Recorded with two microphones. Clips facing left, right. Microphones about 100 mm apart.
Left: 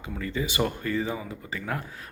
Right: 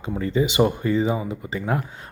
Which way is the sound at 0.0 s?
30° right (ahead or behind).